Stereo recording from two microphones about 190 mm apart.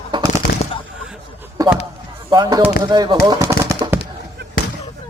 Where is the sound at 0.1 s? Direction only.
25° right (ahead or behind).